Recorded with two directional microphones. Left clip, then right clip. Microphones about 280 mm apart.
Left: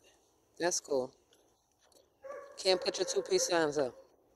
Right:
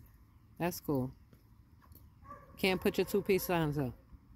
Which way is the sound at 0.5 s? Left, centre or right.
Right.